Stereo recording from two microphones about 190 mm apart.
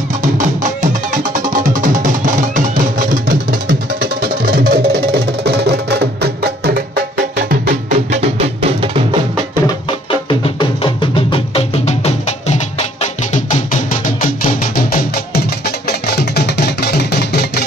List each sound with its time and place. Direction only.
0.2 s music: 40° right (ahead or behind); by 7.7 s 60° right (ahead or behind)
7.9 s music: 35° right (ahead or behind)
10.4 s music: 25° left (ahead or behind); by 17.6 s 60° left (ahead or behind)